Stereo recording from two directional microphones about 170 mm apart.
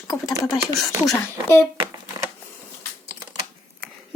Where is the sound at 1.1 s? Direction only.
15° left (ahead or behind).